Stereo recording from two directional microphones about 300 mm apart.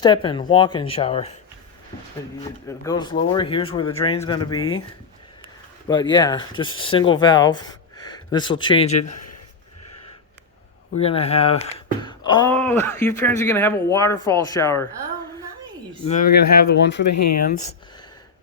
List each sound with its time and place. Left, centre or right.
0.0 s speech: centre
2.4 s speech: centre
5.9 s speech: centre
9.0 s a sound: left
10.9 s speech: centre
16.0 s speech: left
17.1 s speech: left